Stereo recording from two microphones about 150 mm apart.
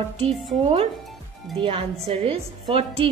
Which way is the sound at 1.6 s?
40° right (ahead or behind).